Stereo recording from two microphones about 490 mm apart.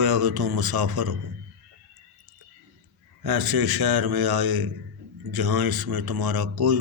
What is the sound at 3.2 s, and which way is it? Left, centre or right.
Mantra, right.